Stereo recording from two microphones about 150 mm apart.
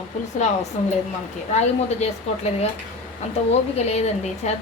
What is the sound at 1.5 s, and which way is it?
A woman's voice, 45° left (ahead or behind).